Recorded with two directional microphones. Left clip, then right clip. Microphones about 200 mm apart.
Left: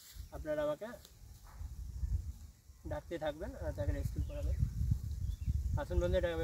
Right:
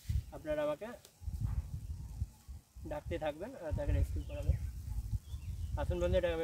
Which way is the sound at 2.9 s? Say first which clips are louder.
Right 1 dB; 10° left (ahead or behind).